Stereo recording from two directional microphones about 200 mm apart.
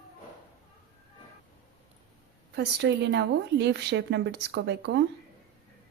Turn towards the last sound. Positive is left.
turn(degrees=-60)  # may be behind; listen again after turning